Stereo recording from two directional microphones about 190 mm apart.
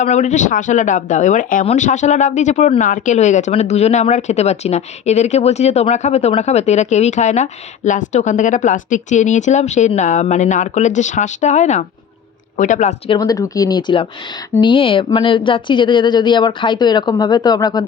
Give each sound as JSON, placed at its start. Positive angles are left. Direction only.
{"t": 0.0, "sound": "speech", "side_deg": 40}
{"t": 13.1, "sound": "speech", "side_deg": 20}